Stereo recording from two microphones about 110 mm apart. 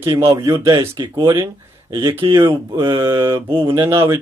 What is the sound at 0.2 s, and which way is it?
Speech, 30° right (ahead or behind).